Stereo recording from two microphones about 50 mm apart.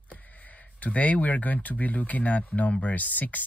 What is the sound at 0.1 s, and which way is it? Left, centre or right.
Speech, left.